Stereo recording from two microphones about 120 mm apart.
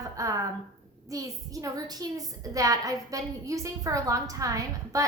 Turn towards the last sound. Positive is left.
turn(degrees=-30)  # may be behind; listen again after turning